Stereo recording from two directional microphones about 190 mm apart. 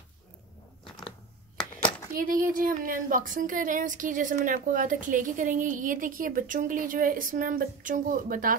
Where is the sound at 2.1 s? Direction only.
45° right (ahead or behind).